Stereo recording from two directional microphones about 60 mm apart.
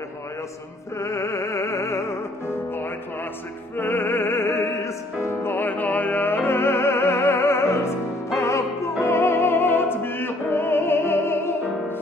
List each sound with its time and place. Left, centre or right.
0.9 s music: left
3.7 s music: left
9.0 s opera: left